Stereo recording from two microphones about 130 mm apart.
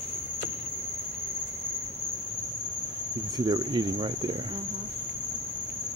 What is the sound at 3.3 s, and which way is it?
Speech, 35° right (ahead or behind).